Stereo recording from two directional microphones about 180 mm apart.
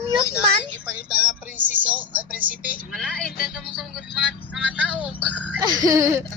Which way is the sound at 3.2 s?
5° left (ahead or behind).